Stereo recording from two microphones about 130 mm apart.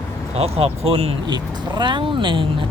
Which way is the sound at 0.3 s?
50° right (ahead or behind).